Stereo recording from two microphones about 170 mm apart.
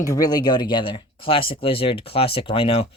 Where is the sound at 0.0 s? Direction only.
20° left (ahead or behind).